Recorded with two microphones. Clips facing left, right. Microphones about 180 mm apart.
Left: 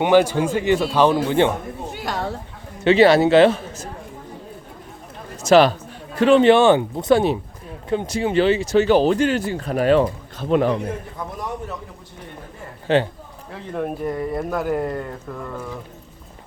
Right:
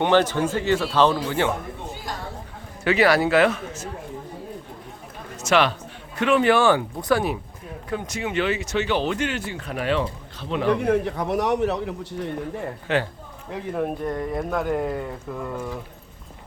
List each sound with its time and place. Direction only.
0.0 s speech: 10° left (ahead or behind)
1.9 s a sound: 70° left (ahead or behind)
2.8 s speech: 25° left (ahead or behind)
5.4 s a man's voice: 35° left (ahead or behind)
10.7 s a man's voice: 70° right (ahead or behind)
12.9 s speech: 30° left (ahead or behind)
13.7 s speech: centre (ahead or behind)